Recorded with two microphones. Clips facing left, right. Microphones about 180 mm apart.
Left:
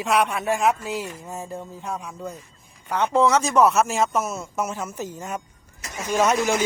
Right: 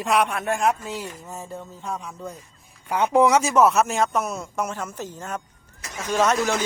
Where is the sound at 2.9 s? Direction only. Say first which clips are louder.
Right 1 dB; 10° right (ahead or behind); by 6.6 s 10° left (ahead or behind).